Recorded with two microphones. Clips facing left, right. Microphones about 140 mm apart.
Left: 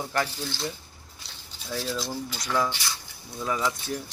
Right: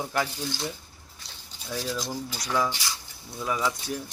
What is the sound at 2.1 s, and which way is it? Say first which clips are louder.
Speech: even; 10° right (ahead or behind).